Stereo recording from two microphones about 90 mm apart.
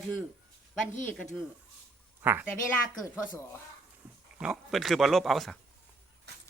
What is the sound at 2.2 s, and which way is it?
Speech, 20° right (ahead or behind).